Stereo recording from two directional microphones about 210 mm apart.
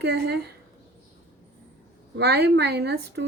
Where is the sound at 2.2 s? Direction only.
50° right (ahead or behind).